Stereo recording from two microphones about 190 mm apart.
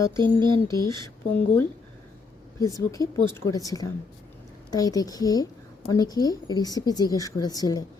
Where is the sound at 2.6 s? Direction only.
15° left (ahead or behind).